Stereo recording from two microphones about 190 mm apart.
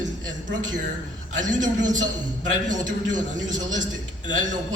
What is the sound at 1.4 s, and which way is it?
Speech, 40° right (ahead or behind).